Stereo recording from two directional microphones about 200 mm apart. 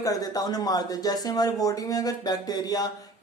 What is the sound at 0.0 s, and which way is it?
Speech, 20° left (ahead or behind).